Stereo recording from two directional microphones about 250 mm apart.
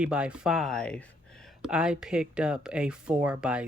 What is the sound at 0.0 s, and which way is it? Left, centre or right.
Speech, centre.